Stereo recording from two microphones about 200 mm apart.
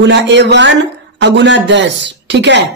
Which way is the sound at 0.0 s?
60° right (ahead or behind).